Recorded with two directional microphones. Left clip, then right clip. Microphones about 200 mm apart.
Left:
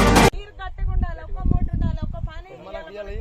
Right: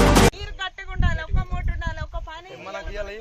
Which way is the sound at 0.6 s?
25° right (ahead or behind).